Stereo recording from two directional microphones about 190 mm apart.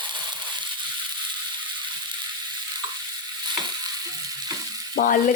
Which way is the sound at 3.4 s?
25° right (ahead or behind).